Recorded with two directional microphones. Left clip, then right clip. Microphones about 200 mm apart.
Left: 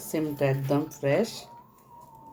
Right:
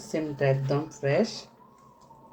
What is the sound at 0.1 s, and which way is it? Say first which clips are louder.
Speech: right 1 dB; 15° left (ahead or behind).